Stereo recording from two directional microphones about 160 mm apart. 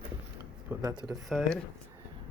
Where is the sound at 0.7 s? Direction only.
10° right (ahead or behind).